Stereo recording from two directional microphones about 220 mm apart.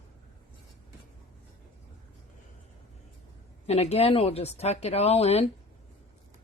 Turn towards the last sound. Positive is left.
turn(degrees=30)  # may be behind; listen again after turning